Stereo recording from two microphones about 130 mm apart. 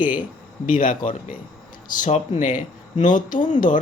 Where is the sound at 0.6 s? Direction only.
90° left.